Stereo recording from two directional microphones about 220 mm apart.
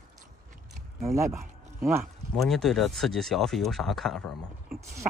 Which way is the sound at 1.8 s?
10° right (ahead or behind).